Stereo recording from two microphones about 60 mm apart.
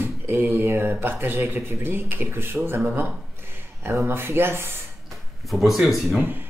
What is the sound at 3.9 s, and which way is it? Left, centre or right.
Speech, right.